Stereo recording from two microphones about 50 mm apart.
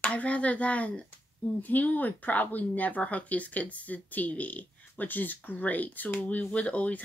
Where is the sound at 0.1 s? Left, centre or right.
Left.